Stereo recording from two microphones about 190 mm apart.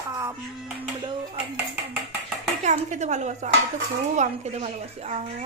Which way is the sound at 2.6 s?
40° right (ahead or behind).